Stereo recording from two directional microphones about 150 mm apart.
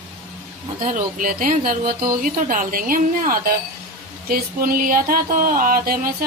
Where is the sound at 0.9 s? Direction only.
60° right (ahead or behind).